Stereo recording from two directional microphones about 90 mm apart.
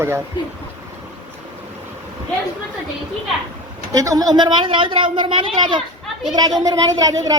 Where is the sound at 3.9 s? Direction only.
40° right (ahead or behind); by 5.8 s 60° right (ahead or behind).